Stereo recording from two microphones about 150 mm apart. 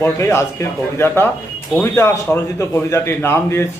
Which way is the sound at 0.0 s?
20° left (ahead or behind).